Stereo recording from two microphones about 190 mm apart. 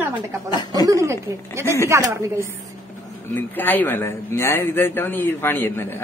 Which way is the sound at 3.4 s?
10° left (ahead or behind).